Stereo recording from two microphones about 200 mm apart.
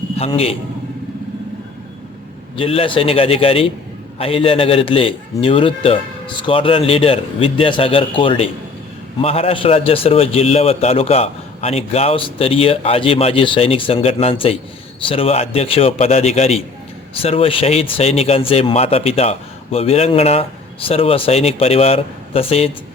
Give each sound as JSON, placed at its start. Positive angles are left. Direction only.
{"t": 0.2, "sound": "speech", "side_deg": 30}
{"t": 2.6, "sound": "a man's voice", "side_deg": 25}